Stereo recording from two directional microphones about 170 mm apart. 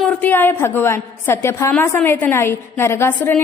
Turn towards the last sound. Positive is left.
turn(degrees=10)  # may be behind; listen again after turning